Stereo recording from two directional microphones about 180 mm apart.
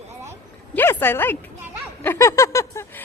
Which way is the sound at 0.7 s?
10° left (ahead or behind).